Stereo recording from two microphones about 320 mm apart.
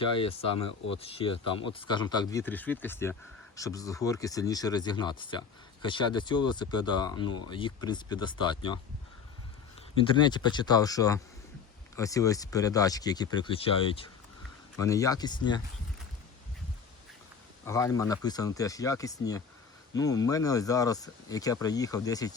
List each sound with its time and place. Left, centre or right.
0.0 s speech: centre
10.0 s speech: centre
17.7 s speech: centre